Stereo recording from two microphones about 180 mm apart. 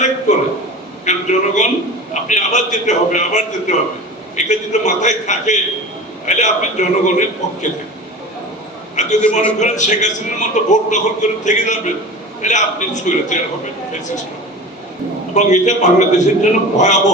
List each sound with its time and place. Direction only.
1.0 s a man's voice: 40° left (ahead or behind)
9.0 s a man's voice: 40° left (ahead or behind)
15.4 s a man's voice: 40° left (ahead or behind)